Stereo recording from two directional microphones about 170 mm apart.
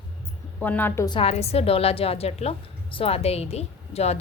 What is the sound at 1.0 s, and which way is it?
A woman's voice, 30° left (ahead or behind).